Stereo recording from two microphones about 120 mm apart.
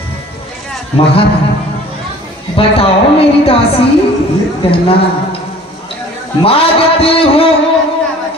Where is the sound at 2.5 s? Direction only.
50° left (ahead or behind).